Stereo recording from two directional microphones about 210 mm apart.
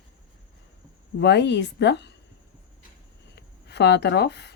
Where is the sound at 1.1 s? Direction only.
55° left (ahead or behind).